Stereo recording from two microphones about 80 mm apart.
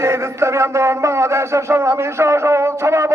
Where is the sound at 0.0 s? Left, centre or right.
Right.